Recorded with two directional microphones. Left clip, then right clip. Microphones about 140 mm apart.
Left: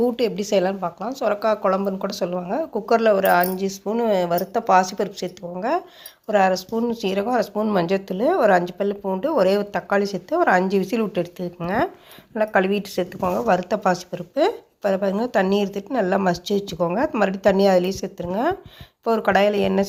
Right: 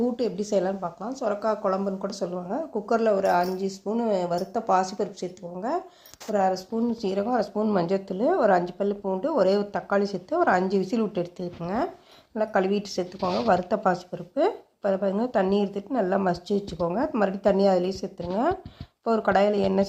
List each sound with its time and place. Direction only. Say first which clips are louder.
0.0 s a woman's voice: left 6 dB; 20° left (ahead or behind)